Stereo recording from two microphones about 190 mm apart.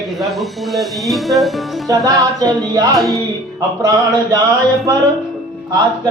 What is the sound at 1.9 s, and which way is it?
Music, 15° right (ahead or behind).